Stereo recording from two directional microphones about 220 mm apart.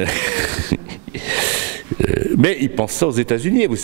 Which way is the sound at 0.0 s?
10° right (ahead or behind).